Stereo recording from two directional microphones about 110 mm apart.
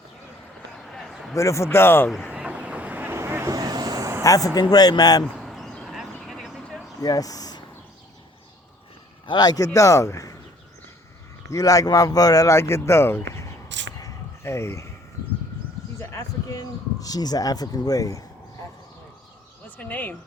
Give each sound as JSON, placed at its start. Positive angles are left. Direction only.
{"t": 0.8, "sound": "a sound", "side_deg": 0}
{"t": 1.4, "sound": "speech", "side_deg": 25}
{"t": 2.3, "sound": "vehicle", "side_deg": -10}
{"t": 3.5, "sound": "vehicle", "side_deg": -35}
{"t": 4.2, "sound": "speech", "side_deg": 30}
{"t": 5.2, "sound": "a sound", "side_deg": 0}
{"t": 7.0, "sound": "speech", "side_deg": 35}
{"t": 9.2, "sound": "speech", "side_deg": 40}
{"t": 11.4, "sound": "speech", "side_deg": 30}
{"t": 14.0, "sound": "a sound", "side_deg": 25}
{"t": 16.0, "sound": "a sound", "side_deg": 30}
{"t": 19.6, "sound": "speech", "side_deg": 15}